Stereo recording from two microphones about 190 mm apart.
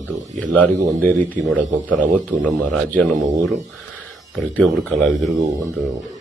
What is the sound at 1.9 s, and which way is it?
Speech, 10° left (ahead or behind).